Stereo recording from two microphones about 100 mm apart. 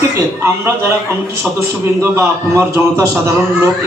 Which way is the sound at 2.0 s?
30° right (ahead or behind).